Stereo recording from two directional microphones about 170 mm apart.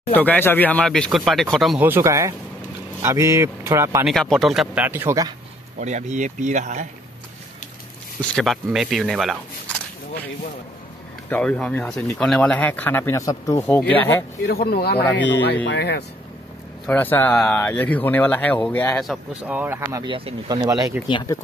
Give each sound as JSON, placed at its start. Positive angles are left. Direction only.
{"t": 0.1, "sound": "speech", "side_deg": 10}
{"t": 1.8, "sound": "speech", "side_deg": -15}
{"t": 4.0, "sound": "speech", "side_deg": 0}
{"t": 5.8, "sound": "speech", "side_deg": -45}
{"t": 8.2, "sound": "speech", "side_deg": 0}
{"t": 11.2, "sound": "speech", "side_deg": 10}
{"t": 14.4, "sound": "speech", "side_deg": 65}
{"t": 15.1, "sound": "speech", "side_deg": 90}
{"t": 16.8, "sound": "speech", "side_deg": 10}
{"t": 19.0, "sound": "speech", "side_deg": -10}
{"t": 20.1, "sound": "speech", "side_deg": -35}
{"t": 20.4, "sound": "speech", "side_deg": -20}